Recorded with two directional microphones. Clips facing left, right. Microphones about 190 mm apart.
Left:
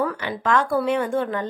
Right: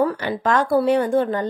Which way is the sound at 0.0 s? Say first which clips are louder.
Right 4 dB; 35° right (ahead or behind).